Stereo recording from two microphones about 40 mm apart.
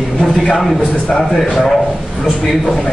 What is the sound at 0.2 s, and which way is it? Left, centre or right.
A man's voice, centre.